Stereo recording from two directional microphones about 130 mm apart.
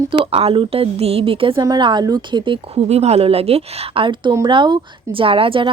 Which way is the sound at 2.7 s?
55° right (ahead or behind).